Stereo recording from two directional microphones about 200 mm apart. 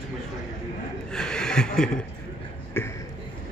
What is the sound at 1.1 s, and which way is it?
Chuckle, 5° left (ahead or behind).